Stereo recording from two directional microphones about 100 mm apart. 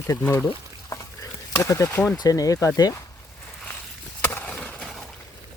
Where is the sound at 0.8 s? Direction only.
35° left (ahead or behind).